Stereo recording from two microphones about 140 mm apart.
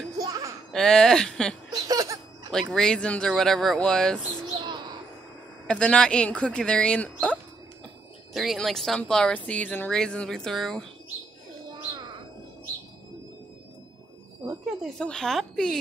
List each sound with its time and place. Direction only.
0.2 s a sound: 25° right (ahead or behind)
0.7 s speech: 5° left (ahead or behind)
1.7 s laughter: 25° right (ahead or behind)
2.5 s speech: 5° left (ahead or behind)
4.6 s bird: 30° right (ahead or behind)
5.7 s speech: 5° left (ahead or behind)
14.8 s speech: 5° left (ahead or behind)